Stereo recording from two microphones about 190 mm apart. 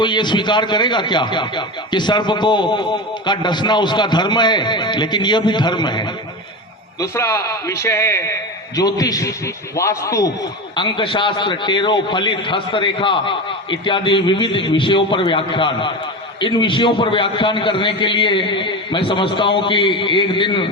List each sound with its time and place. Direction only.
0.0 s a man's voice: 25° left (ahead or behind)